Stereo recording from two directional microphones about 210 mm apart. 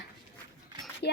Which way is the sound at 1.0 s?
50° left (ahead or behind).